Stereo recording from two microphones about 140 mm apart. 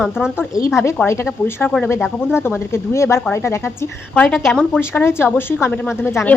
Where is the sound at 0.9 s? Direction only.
20° left (ahead or behind).